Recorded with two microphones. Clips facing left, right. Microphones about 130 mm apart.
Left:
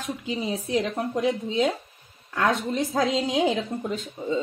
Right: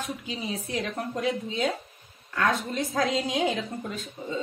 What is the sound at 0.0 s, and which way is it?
A woman's voice, 25° left (ahead or behind).